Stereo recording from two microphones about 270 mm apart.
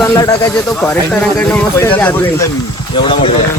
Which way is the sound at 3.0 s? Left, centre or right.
Left.